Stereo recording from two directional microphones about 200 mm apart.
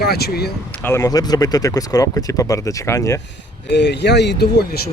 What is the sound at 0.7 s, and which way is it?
Speech, 10° left (ahead or behind).